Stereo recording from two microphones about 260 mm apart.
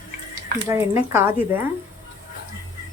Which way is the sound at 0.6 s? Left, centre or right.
Centre.